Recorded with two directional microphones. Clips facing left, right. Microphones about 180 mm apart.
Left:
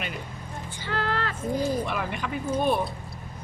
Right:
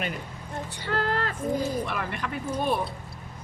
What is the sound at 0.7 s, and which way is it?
Vehicle, 55° right (ahead or behind).